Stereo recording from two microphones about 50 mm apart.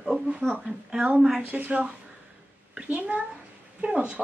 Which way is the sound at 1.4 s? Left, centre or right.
Right.